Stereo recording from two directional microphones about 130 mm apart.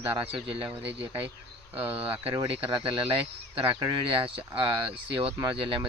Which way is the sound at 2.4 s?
40° right (ahead or behind).